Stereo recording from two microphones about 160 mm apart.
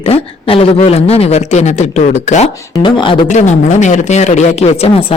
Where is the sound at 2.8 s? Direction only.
30° left (ahead or behind).